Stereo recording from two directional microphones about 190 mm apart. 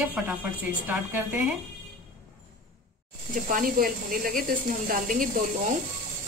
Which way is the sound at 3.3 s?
45° right (ahead or behind).